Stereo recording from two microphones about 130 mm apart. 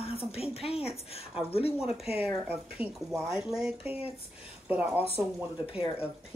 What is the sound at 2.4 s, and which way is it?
Speech, 15° right (ahead or behind).